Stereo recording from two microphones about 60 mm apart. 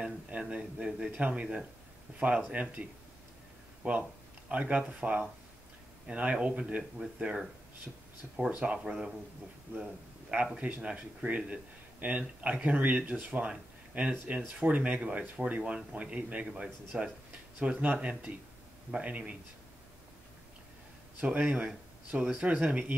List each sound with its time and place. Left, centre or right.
0.0 s speech: centre
8.5 s speech: right
8.7 s speech: centre
9.7 s a man's voice: right
10.3 s speech: centre
21.2 s speech: centre
22.5 s speech: right